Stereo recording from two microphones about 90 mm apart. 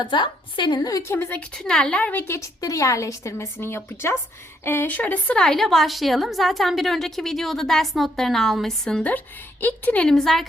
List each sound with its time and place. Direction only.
0.0 s a woman's voice: 60° left (ahead or behind)
0.8 s a woman's voice: 40° left (ahead or behind)
1.1 s a woman's voice: 25° left (ahead or behind)
1.5 s speech: 10° left (ahead or behind)
2.2 s a woman's voice: 35° left (ahead or behind); by 9.0 s 5° left (ahead or behind)
9.0 s speech: 20° left (ahead or behind); by 10.4 s 5° left (ahead or behind)